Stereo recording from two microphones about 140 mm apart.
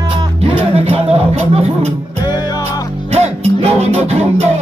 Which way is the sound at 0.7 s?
45° right (ahead or behind).